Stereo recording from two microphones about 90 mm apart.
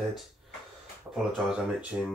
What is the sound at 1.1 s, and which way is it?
Speech, 20° right (ahead or behind).